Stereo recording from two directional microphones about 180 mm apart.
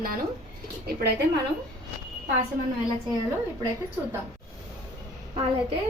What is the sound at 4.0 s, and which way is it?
Speech, 15° right (ahead or behind).